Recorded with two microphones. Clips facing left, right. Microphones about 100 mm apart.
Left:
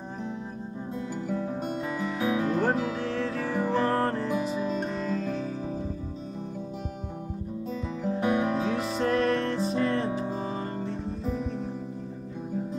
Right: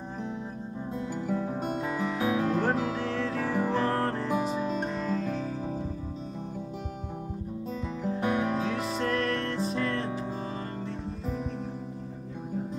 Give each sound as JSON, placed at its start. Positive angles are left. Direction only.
{"t": 1.2, "sound": "music", "side_deg": -5}
{"t": 8.2, "sound": "music", "side_deg": 10}